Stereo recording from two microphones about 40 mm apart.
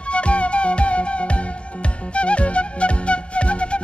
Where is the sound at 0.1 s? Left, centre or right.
Left.